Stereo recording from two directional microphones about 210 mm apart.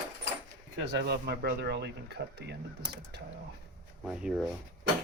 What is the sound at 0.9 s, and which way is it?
Speech, 55° right (ahead or behind).